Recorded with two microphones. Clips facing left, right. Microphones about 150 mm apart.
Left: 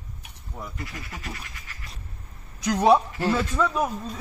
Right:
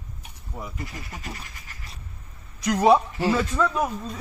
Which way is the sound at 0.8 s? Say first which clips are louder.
Right 1 dB; 25° right (ahead or behind).